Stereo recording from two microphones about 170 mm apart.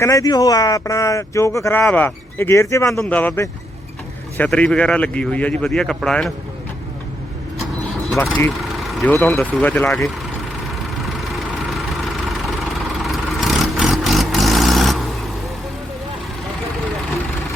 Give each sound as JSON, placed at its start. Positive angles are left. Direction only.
{"t": 0.0, "sound": "speech", "side_deg": 20}
{"t": 8.9, "sound": "speech", "side_deg": 0}
{"t": 11.2, "sound": "vehicle", "side_deg": 0}
{"t": 13.0, "sound": "vehicle", "side_deg": 0}